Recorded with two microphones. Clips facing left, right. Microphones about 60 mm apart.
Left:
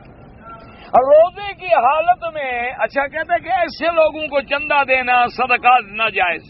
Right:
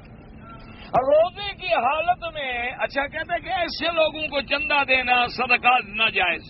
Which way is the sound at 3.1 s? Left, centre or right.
Left.